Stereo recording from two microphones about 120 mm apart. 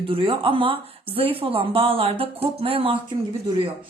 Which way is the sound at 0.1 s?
45° right (ahead or behind).